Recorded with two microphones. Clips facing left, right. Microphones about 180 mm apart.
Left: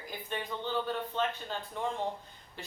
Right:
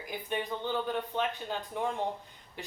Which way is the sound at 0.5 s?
15° right (ahead or behind).